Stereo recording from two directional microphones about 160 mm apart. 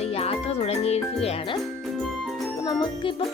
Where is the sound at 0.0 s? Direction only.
40° left (ahead or behind).